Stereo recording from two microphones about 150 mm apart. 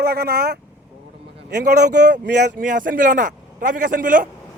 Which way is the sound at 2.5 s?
65° right (ahead or behind).